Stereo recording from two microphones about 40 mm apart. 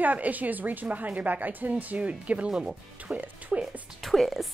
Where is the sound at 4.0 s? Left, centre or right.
Centre.